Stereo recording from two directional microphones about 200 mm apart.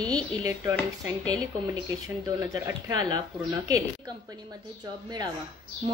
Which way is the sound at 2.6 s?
20° right (ahead or behind).